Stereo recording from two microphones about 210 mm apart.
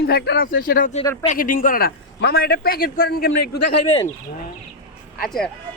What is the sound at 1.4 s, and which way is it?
Speech, 40° left (ahead or behind).